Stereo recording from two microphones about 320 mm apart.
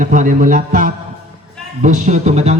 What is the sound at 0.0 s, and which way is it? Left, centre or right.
Speech, right.